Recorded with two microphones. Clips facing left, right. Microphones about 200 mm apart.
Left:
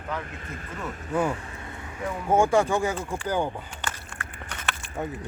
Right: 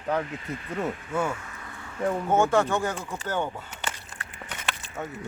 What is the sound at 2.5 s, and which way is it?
Speech, 10° left (ahead or behind).